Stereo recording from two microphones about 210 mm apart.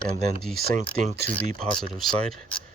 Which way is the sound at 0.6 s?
40° right (ahead or behind).